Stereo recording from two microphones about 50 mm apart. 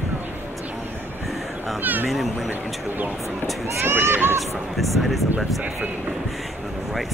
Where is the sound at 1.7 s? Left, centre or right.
Right.